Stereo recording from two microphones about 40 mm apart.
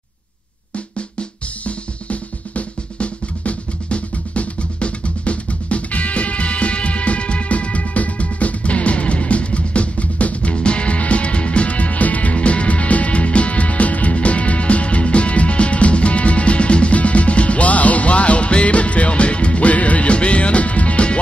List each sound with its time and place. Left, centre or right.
2.0 s drum: left